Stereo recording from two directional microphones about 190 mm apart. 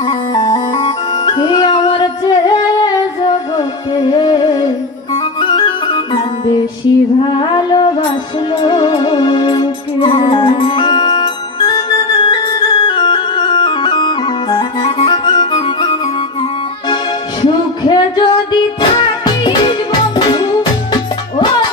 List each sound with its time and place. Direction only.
0.0 s music: 20° left (ahead or behind)